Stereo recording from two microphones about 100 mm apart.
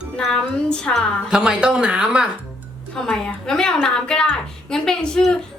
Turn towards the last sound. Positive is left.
turn(degrees=5)  # may be behind; listen again after turning